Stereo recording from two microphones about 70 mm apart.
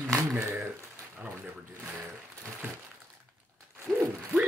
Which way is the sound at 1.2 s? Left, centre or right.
Right.